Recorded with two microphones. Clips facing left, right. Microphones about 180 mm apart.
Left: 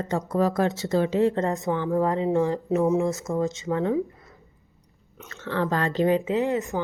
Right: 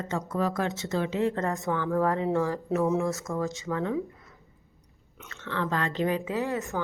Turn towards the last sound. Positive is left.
turn(degrees=20)  # may be behind; listen again after turning